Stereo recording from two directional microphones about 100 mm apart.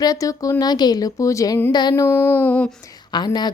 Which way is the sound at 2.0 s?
25° left (ahead or behind).